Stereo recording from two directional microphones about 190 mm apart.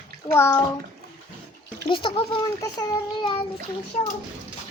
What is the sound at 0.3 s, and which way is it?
Speech, 15° left (ahead or behind).